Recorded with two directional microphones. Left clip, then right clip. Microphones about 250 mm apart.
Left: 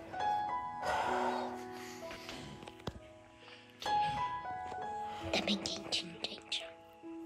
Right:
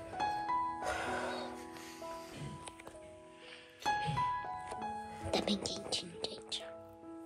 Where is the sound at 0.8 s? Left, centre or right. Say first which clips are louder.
Left 4 dB; centre.